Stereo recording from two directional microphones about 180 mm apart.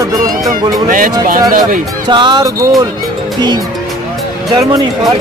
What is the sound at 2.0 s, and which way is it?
Speech, 25° right (ahead or behind).